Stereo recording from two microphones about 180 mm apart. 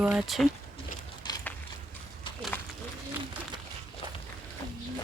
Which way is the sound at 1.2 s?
25° left (ahead or behind).